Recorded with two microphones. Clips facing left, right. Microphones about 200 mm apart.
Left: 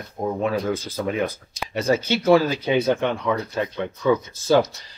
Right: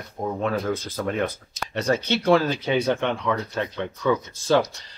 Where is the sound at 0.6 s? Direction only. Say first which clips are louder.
Left 2 dB; centre (ahead or behind).